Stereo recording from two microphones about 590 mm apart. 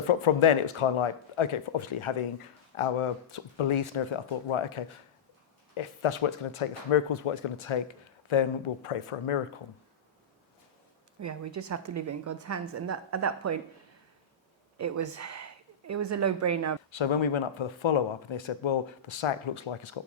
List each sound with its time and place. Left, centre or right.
0.1 s speech: left
11.2 s a woman's voice: right
14.8 s a woman's voice: right
16.9 s speech: left